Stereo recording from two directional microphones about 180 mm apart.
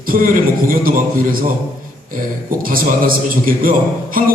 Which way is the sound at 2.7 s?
55° right (ahead or behind).